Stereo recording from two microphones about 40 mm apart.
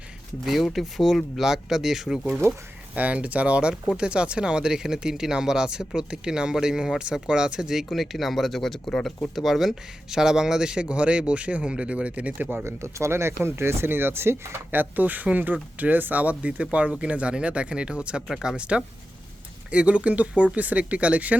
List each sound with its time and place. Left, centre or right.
0.4 s speech: centre
2.9 s speech: right; by 8.8 s centre
9.3 s speech: centre
10.8 s speech: right
12.6 s speech: right
14.8 s speech: right